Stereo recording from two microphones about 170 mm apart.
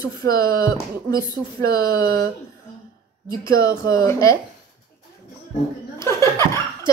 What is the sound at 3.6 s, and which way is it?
Speech, 20° left (ahead or behind).